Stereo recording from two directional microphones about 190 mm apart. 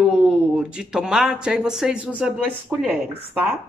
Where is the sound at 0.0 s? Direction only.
5° right (ahead or behind).